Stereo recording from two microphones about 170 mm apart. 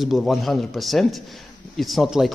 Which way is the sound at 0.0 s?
Centre (ahead or behind).